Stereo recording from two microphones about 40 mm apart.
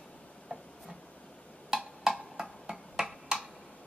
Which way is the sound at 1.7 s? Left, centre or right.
Centre.